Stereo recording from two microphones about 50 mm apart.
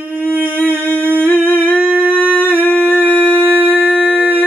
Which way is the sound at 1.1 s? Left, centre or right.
Left.